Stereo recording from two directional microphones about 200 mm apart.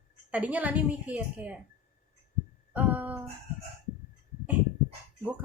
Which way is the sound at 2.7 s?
5° right (ahead or behind).